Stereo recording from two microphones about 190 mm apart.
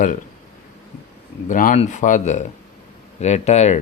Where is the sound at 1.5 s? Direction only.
45° left (ahead or behind).